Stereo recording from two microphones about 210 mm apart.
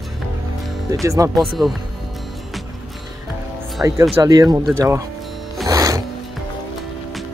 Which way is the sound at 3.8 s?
10° right (ahead or behind).